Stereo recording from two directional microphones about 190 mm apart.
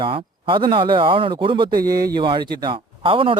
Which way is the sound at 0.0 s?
25° right (ahead or behind).